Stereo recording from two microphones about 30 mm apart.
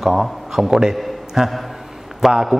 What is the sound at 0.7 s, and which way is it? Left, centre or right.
Speech, right.